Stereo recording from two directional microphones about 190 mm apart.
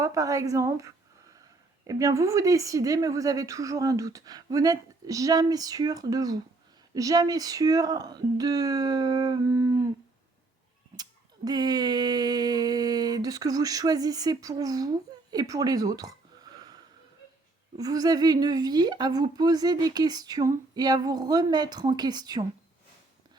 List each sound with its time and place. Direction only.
0.0 s a woman's voice: 15° right (ahead or behind)
10.9 s a sound: 20° right (ahead or behind)
17.7 s a woman's voice: 20° right (ahead or behind)